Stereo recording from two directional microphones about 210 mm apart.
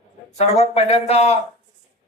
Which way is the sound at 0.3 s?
30° left (ahead or behind).